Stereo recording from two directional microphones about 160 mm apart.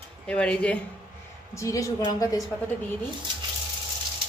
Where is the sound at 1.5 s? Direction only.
20° left (ahead or behind).